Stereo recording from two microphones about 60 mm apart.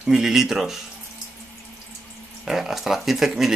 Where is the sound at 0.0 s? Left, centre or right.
Centre.